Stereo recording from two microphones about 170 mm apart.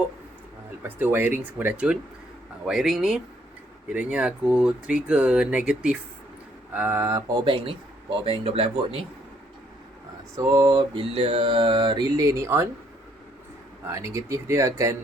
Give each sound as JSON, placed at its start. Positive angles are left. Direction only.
{"t": 0.8, "sound": "speech", "side_deg": -10}
{"t": 7.4, "sound": "speech", "side_deg": -30}
{"t": 10.3, "sound": "mantra", "side_deg": -20}
{"t": 13.8, "sound": "speech", "side_deg": -15}